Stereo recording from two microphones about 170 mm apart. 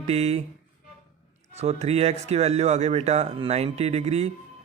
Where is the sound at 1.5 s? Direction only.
40° right (ahead or behind).